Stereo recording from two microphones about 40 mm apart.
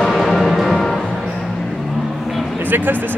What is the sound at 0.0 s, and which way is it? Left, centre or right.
Music, centre.